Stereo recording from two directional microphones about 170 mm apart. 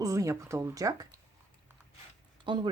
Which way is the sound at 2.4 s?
30° right (ahead or behind).